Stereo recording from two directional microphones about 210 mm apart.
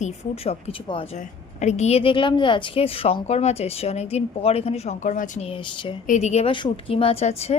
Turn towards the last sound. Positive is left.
turn(degrees=30)  # may be behind; listen again after turning